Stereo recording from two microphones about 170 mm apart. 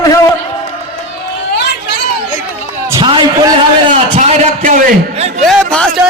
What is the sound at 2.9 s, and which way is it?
A man's voice, 25° right (ahead or behind).